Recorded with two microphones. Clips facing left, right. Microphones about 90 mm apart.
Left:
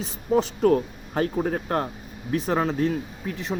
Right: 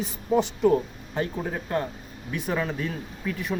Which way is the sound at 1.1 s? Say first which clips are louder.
Left 5 dB; 55° left (ahead or behind).